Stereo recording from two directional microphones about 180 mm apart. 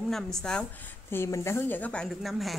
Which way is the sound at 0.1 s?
5° left (ahead or behind).